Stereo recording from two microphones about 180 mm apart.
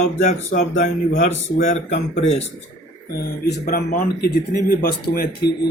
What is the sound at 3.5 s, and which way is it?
Speech, 55° left (ahead or behind).